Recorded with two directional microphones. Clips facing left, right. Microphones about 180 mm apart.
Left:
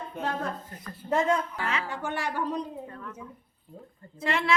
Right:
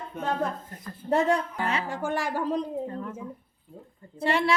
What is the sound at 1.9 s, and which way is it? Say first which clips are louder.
Speech: right 3 dB; 45° right (ahead or behind).